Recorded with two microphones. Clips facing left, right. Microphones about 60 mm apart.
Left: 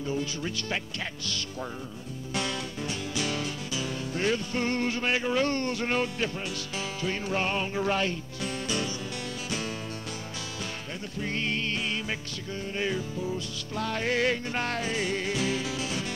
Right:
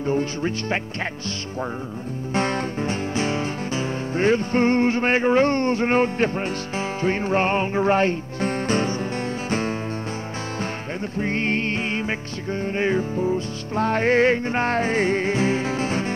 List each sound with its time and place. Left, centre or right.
0.0 s music: right
2.3 s music: right
11.1 s music: right